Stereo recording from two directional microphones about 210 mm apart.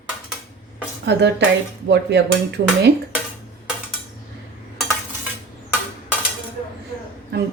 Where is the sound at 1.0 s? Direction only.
55° right (ahead or behind).